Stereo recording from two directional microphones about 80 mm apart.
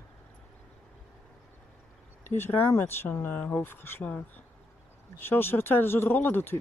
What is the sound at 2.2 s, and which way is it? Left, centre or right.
Speech, left.